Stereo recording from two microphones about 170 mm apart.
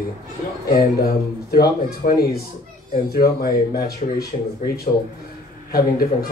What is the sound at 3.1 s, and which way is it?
A man's voice, 65° left (ahead or behind).